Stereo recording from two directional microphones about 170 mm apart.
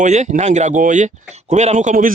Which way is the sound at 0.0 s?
45° right (ahead or behind).